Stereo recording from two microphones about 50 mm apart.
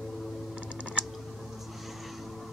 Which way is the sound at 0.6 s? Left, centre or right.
Right.